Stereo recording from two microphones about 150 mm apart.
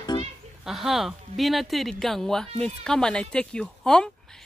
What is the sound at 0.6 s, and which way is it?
Speech, centre (ahead or behind).